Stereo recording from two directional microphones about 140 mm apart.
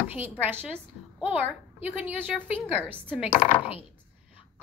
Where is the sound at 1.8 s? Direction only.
10° right (ahead or behind).